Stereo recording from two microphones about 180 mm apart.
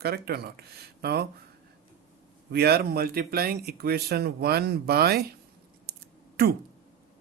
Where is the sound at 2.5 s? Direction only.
60° right (ahead or behind).